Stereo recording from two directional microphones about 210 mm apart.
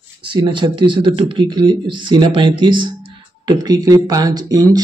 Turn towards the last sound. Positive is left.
turn(degrees=-20)  # may be behind; listen again after turning